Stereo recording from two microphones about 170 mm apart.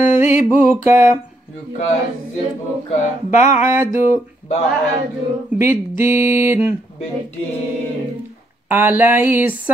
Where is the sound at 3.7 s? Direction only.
15° right (ahead or behind).